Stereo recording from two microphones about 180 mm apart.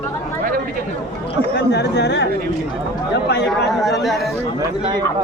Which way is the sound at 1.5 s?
70° left (ahead or behind).